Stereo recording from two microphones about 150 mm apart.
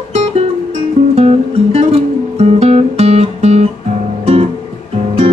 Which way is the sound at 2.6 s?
45° right (ahead or behind).